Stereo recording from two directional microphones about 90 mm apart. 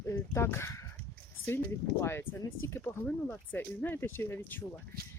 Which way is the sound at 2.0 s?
25° left (ahead or behind).